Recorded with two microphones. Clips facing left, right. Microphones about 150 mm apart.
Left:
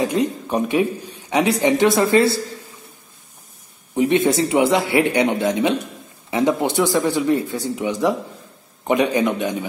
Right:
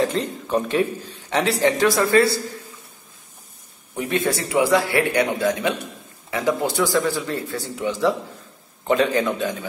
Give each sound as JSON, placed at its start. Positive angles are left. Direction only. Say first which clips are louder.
{"t": 0.0, "sound": "a man's voice", "louder": "left 3 dB", "side_deg": 15}
{"t": 3.9, "sound": "a man's voice", "louder": "left 6 dB", "side_deg": 20}